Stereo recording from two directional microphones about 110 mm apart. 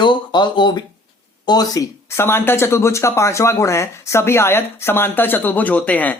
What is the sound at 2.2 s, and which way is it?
Speech, 20° left (ahead or behind).